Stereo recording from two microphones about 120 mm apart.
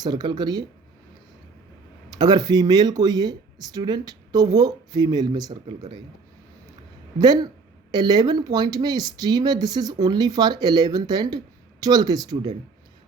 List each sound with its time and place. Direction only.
0.0 s speech: 40° right (ahead or behind)
2.0 s speech: 35° right (ahead or behind)
7.9 s speech: 35° right (ahead or behind)